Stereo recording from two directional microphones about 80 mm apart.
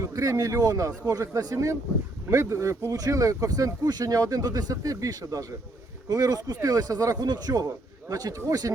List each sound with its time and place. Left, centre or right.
0.0 s speech: right